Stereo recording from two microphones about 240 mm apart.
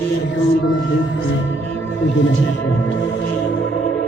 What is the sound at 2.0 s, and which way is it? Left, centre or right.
Music, left.